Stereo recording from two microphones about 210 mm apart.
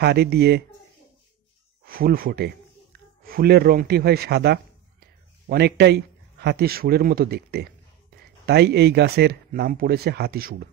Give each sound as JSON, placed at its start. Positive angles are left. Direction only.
{"t": 0.0, "sound": "speech", "side_deg": -50}
{"t": 1.9, "sound": "speech", "side_deg": -45}